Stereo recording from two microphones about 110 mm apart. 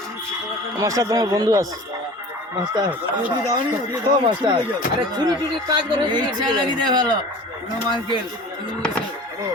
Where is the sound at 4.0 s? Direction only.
45° right (ahead or behind).